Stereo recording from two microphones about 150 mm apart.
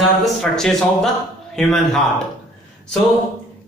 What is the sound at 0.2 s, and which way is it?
Speech, 5° left (ahead or behind).